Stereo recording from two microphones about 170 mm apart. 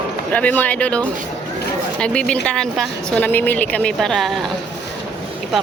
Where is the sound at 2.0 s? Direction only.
5° left (ahead or behind).